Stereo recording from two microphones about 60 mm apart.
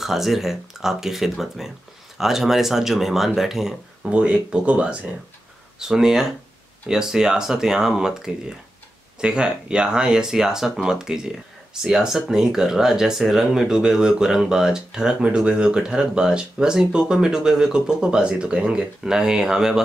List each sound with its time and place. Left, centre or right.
0.0 s speech: centre
4.1 s speech: centre